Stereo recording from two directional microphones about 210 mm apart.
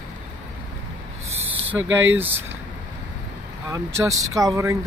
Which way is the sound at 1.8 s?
10° right (ahead or behind).